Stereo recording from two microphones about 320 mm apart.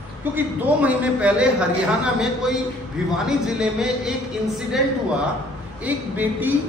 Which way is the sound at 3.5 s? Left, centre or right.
Centre.